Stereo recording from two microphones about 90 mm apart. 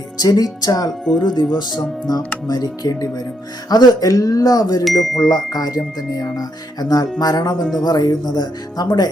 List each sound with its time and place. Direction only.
0.2 s music: 45° left (ahead or behind)
1.2 s speech: 55° left (ahead or behind)
2.1 s music: 45° left (ahead or behind)
7.6 s speech: centre (ahead or behind)
7.9 s music: 45° left (ahead or behind)